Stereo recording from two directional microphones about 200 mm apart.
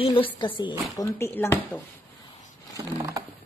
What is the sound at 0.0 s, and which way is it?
A woman's voice, 25° left (ahead or behind).